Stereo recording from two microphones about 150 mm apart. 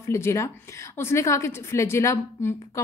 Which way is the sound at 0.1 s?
20° left (ahead or behind).